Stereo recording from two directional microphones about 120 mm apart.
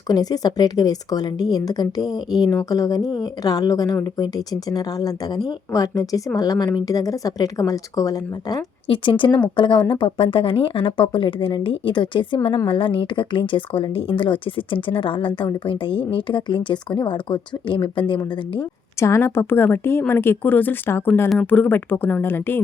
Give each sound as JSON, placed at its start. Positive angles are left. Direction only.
{"t": 0.1, "sound": "a woman's voice", "side_deg": 35}
{"t": 8.9, "sound": "a woman's voice", "side_deg": 45}
{"t": 18.9, "sound": "a woman's voice", "side_deg": 25}